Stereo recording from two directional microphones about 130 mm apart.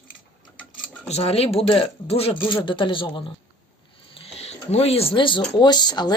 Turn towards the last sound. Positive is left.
turn(degrees=35)  # may be behind; listen again after turning